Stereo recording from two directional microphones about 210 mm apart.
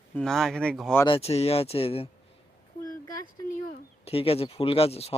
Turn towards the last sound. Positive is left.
turn(degrees=30)  # may be behind; listen again after turning